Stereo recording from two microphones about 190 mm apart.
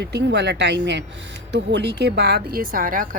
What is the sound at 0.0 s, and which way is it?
Speech, 65° right (ahead or behind).